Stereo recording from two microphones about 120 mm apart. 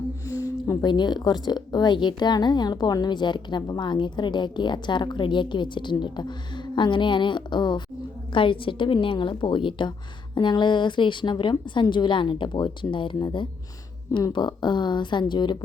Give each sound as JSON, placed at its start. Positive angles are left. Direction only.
{"t": 0.4, "sound": "a woman's voice", "side_deg": 30}